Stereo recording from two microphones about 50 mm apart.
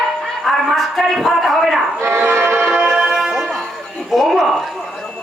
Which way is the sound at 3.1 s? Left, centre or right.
Centre.